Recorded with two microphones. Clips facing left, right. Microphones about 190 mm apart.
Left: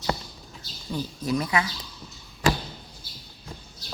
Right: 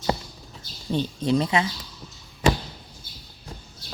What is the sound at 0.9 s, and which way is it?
Speech, 25° right (ahead or behind).